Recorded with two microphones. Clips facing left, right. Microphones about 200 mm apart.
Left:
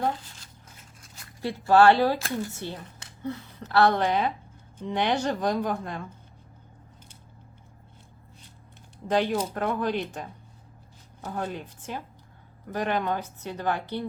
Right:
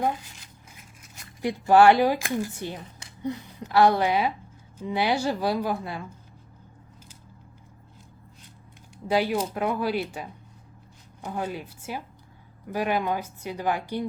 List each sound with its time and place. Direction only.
0.0 s speech: 10° right (ahead or behind)
1.4 s speech: 15° right (ahead or behind)
9.0 s speech: 10° right (ahead or behind)